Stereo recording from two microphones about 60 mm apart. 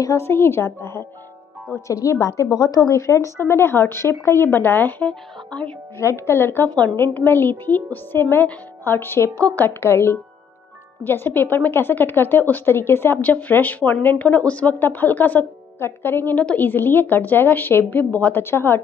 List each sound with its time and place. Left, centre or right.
0.2 s a woman's voice: left
1.9 s a woman's voice: left
2.5 s a woman's voice: left
5.5 s speech: centre
5.9 s a woman's voice: left
13.2 s a woman's voice: left
18.4 s a woman's voice: left